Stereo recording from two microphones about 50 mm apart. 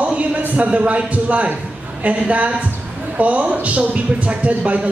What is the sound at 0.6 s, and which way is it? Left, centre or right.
A woman's voice, right.